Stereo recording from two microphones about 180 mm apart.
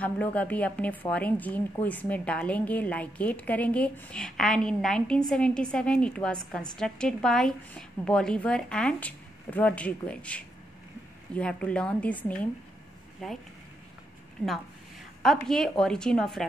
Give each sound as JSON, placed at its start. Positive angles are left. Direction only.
{"t": 0.0, "sound": "a woman's voice", "side_deg": 10}
{"t": 15.2, "sound": "a woman's voice", "side_deg": 0}